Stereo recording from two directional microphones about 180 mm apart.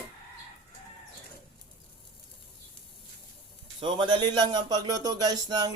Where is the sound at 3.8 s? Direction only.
30° right (ahead or behind).